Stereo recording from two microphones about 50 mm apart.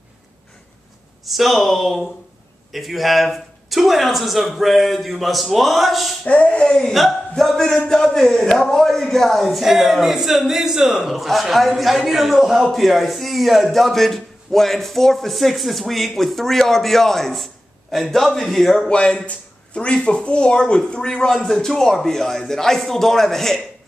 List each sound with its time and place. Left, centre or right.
1.2 s a man's voice: centre
6.2 s speech: left
6.8 s a man's voice: centre
18.9 s speech: centre